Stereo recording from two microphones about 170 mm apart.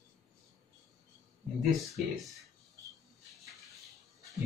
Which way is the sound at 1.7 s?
Centre (ahead or behind).